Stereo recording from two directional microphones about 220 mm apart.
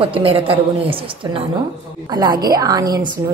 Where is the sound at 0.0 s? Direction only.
25° right (ahead or behind).